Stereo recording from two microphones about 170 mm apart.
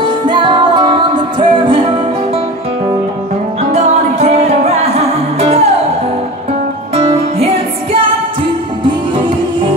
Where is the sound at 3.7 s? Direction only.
40° right (ahead or behind).